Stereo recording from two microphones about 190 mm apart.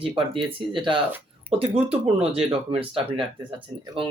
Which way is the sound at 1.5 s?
10° right (ahead or behind).